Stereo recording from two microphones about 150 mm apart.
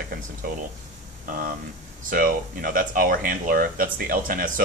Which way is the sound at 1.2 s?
70° right (ahead or behind).